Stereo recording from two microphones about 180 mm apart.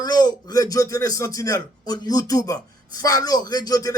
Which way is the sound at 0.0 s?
20° left (ahead or behind).